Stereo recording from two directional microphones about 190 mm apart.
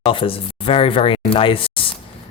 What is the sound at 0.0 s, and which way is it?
Speech, 30° left (ahead or behind).